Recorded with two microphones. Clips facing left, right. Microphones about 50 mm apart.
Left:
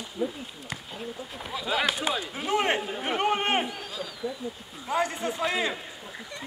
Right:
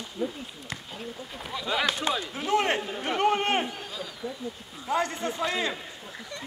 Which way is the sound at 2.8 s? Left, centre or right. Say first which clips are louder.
Left 1 dB; centre.